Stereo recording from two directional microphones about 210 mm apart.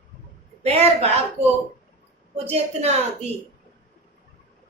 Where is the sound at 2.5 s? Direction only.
30° right (ahead or behind).